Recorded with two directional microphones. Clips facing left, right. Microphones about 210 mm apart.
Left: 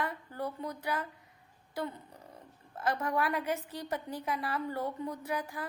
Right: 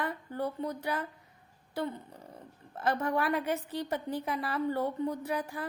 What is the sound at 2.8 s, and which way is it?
A woman's voice, 25° right (ahead or behind).